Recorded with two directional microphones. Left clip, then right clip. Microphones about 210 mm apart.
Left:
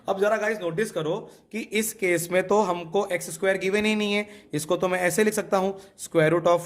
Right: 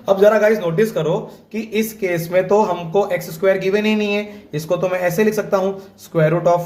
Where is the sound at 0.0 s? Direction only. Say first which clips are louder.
Right 11 dB; 20° left (ahead or behind).